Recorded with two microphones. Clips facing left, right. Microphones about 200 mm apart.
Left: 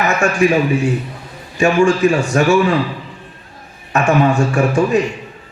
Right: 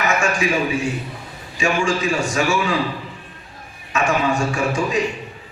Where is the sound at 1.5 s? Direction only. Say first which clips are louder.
Left 7 dB; 60° left (ahead or behind).